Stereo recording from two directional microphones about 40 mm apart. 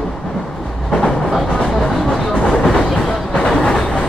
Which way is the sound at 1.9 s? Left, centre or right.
Centre.